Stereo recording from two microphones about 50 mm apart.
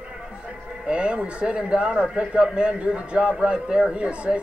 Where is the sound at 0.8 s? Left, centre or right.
Right.